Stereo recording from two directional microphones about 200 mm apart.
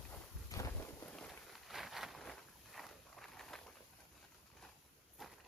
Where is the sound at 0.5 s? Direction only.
15° left (ahead or behind).